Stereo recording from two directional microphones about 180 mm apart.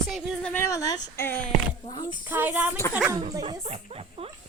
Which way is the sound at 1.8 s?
25° left (ahead or behind).